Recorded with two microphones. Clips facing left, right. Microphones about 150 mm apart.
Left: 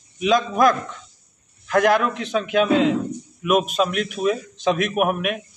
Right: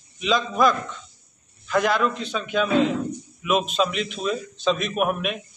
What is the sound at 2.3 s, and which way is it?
Speech, 75° left (ahead or behind).